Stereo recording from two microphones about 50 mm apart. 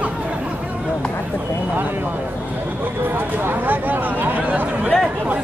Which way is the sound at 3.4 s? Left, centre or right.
Right.